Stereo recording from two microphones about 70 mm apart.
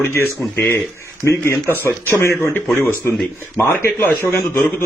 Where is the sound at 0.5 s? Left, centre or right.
Left.